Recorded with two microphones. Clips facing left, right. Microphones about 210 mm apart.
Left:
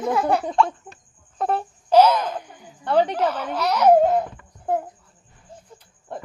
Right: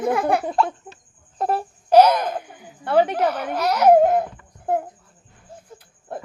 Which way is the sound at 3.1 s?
10° right (ahead or behind).